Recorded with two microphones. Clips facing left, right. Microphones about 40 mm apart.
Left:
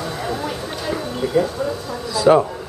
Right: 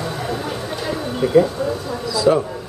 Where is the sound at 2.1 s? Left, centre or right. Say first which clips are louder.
Left 3 dB; left.